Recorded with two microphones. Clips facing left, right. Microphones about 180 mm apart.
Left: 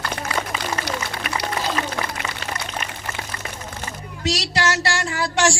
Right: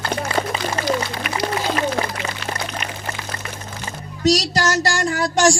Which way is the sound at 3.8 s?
40° right (ahead or behind).